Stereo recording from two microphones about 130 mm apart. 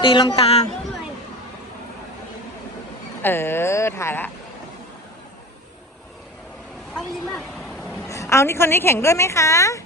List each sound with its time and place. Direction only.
0.0 s speech: 35° left (ahead or behind)
0.3 s speech: 50° left (ahead or behind)
3.2 s speech: 15° left (ahead or behind)
6.9 s speech: 5° left (ahead or behind)
8.0 s a woman's voice: 25° left (ahead or behind)